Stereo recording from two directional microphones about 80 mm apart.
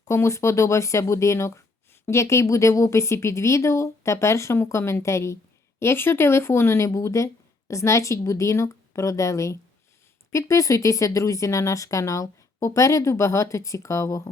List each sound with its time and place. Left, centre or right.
0.0 s speech: left